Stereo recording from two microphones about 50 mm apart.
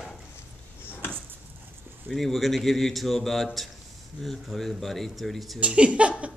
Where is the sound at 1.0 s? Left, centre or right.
Left.